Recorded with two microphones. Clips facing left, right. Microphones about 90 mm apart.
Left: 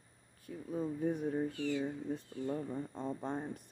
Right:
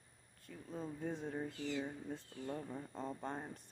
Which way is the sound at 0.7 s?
10° left (ahead or behind).